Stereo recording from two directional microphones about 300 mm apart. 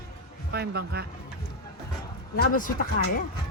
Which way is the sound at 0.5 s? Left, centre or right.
Right.